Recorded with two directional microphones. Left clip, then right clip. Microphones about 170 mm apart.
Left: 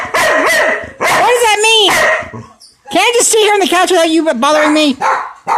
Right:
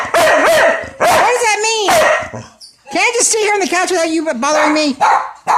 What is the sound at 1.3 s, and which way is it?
Speech, 20° left (ahead or behind).